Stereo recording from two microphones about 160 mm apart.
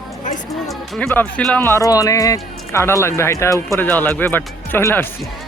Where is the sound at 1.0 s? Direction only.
10° left (ahead or behind).